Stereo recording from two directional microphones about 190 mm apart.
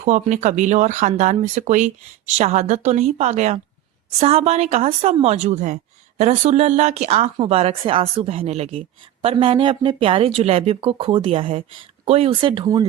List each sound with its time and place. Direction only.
0.0 s a woman's voice: 40° right (ahead or behind); by 12.8 s 25° right (ahead or behind)